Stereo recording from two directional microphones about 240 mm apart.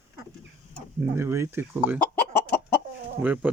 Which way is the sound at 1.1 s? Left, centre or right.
Centre.